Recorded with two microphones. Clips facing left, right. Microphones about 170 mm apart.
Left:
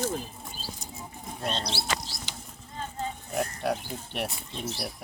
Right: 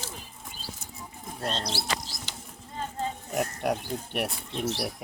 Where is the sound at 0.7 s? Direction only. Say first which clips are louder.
Left 2 dB; 15° left (ahead or behind).